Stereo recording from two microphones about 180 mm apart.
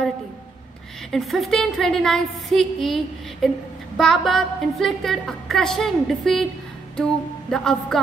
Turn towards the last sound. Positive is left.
turn(degrees=5)  # may be behind; listen again after turning